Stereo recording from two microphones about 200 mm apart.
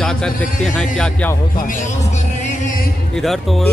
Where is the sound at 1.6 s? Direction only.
40° left (ahead or behind).